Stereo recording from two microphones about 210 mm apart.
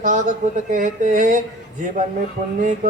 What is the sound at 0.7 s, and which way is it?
Mantra, 40° right (ahead or behind).